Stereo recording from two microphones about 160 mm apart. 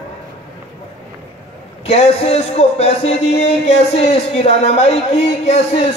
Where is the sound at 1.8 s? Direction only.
40° left (ahead or behind).